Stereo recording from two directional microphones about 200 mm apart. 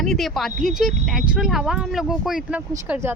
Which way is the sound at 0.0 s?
Centre (ahead or behind).